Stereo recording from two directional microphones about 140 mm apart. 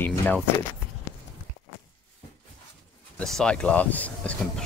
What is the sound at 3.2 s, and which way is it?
Speech, 5° left (ahead or behind).